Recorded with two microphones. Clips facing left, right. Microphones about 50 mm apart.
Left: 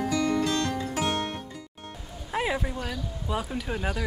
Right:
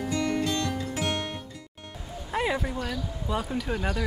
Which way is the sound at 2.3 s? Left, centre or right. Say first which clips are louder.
Right 1 dB; centre.